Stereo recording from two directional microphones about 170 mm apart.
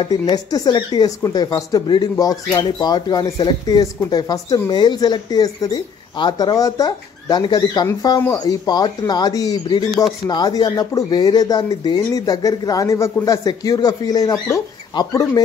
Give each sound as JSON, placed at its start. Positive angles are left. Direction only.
{"t": 0.0, "sound": "speech", "side_deg": 25}